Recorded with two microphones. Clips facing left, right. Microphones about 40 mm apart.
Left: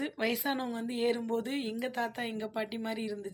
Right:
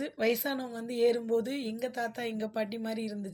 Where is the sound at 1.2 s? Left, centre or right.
Left.